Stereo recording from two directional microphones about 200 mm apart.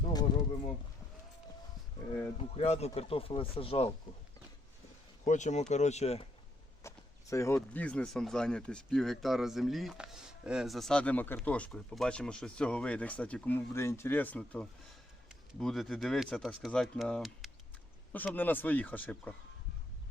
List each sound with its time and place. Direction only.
0.3 s speech: 20° left (ahead or behind)
2.4 s speech: 30° left (ahead or behind)
5.2 s speech: 35° left (ahead or behind)
6.8 s speech: 15° left (ahead or behind)